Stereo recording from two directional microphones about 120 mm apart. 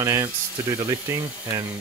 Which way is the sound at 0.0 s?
25° right (ahead or behind).